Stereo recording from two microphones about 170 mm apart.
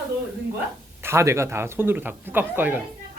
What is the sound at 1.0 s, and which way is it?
Speech, 15° right (ahead or behind).